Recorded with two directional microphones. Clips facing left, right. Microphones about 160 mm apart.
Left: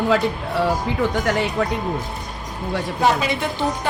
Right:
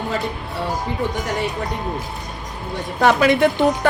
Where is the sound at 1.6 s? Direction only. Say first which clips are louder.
Left 5 dB; 90° left.